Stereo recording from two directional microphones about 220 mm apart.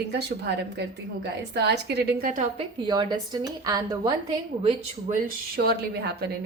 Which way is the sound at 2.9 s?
20° right (ahead or behind).